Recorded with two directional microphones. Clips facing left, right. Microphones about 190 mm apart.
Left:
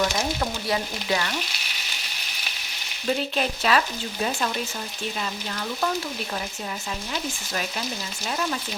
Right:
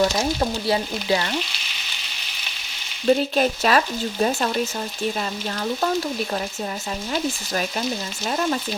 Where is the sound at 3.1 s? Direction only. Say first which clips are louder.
Right 7 dB; 40° right (ahead or behind).